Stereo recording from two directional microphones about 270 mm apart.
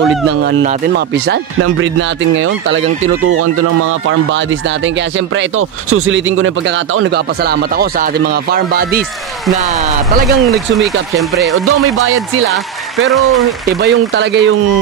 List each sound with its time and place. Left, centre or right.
0.5 s speech: right
5.9 s speech: right
7.4 s speech: right
10.4 s speech: centre
13.0 s speech: centre
13.7 s speech: right